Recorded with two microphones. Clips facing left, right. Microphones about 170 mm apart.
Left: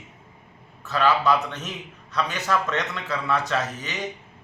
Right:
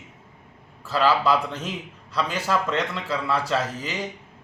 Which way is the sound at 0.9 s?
30° right (ahead or behind).